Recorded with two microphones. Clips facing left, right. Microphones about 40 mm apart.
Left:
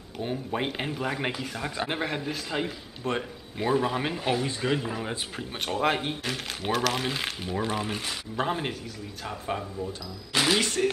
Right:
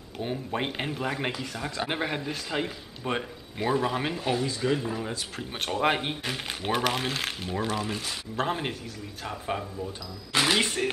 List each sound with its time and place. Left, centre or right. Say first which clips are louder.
0.2 s a man's voice: left 1 dB; centre
1.9 s a man's voice: even; centre
4.2 s speech: even; centre
5.4 s a man's voice: right 1 dB; centre
7.7 s speech: even; centre
8.5 s a man's voice: even; centre